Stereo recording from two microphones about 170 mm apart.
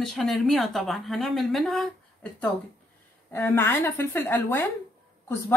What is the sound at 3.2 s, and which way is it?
A woman's voice, 10° left (ahead or behind).